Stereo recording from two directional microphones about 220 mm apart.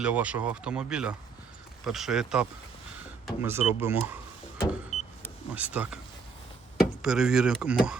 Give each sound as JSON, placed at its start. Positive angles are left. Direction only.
{"t": 0.0, "sound": "speech", "side_deg": -5}
{"t": 4.9, "sound": "vehicle", "side_deg": 90}
{"t": 5.5, "sound": "speech", "side_deg": -5}
{"t": 7.0, "sound": "speech", "side_deg": -5}